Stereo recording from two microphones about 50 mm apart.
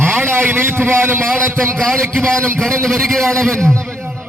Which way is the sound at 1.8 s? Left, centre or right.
Centre.